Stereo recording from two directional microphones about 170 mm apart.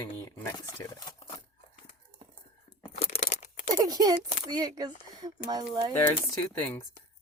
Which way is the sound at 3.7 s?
20° right (ahead or behind).